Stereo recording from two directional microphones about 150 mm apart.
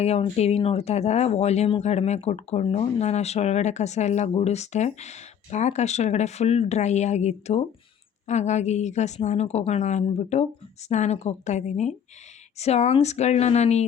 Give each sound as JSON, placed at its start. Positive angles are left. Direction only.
{"t": 0.0, "sound": "speech", "side_deg": 45}